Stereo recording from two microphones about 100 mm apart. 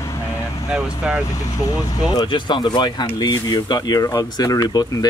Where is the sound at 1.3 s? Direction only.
35° left (ahead or behind).